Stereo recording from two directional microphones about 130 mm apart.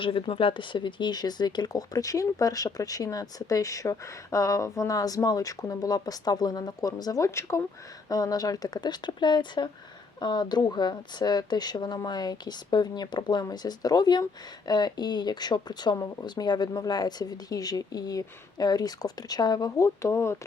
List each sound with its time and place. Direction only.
0.0 s speech: 45° left (ahead or behind); by 20.3 s 20° left (ahead or behind)